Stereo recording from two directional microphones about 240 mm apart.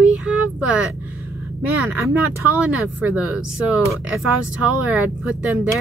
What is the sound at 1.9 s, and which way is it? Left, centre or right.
Speech, centre.